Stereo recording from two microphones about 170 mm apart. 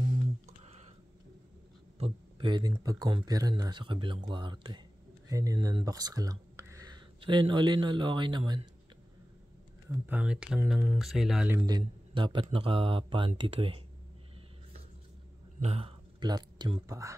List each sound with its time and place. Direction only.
0.7 s a sound: 40° right (ahead or behind)
2.0 s a sound: 30° right (ahead or behind)
2.7 s speech: 20° right (ahead or behind)
10.0 s speech: 10° right (ahead or behind)
11.5 s speech: 25° right (ahead or behind)
15.6 s speech: 35° right (ahead or behind); by 17.1 s 20° right (ahead or behind)